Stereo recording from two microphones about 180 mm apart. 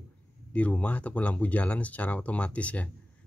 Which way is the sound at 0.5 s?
5° left (ahead or behind).